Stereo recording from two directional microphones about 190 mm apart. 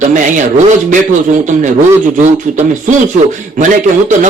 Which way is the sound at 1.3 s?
40° right (ahead or behind).